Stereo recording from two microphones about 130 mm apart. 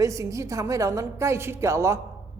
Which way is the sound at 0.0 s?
25° right (ahead or behind).